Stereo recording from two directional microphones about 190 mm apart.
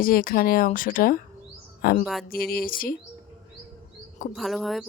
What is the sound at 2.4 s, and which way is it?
Speech, 50° left (ahead or behind).